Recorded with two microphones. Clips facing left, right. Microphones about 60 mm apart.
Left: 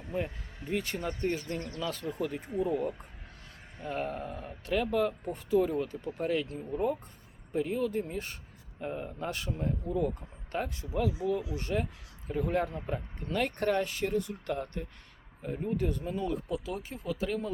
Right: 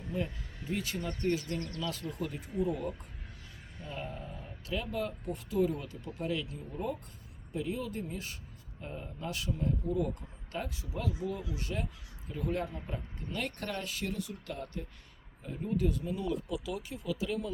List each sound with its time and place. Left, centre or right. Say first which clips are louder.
0.1 s speech: left 2 dB; left
1.3 s speech: right 1 dB; left
1.5 s speech: left 1 dB; centre
2.0 s speech: left 4 dB; left
3.8 s speech: left 7 dB; left